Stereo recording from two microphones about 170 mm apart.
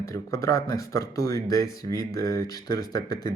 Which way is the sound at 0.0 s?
20° left (ahead or behind).